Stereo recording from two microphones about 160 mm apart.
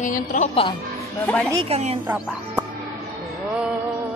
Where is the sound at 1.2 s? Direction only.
10° left (ahead or behind).